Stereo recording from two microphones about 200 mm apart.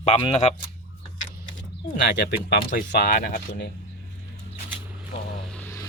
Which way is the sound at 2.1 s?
60° left (ahead or behind).